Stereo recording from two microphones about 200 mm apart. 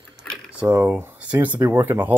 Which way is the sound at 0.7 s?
10° right (ahead or behind).